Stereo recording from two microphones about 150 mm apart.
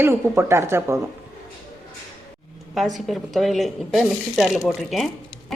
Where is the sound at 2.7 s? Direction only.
Centre (ahead or behind).